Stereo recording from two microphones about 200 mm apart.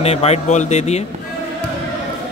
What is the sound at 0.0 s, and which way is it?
A man's voice, 30° left (ahead or behind).